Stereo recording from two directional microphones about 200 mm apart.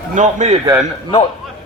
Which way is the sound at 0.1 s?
40° right (ahead or behind).